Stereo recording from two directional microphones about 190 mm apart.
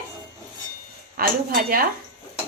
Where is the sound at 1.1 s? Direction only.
50° right (ahead or behind).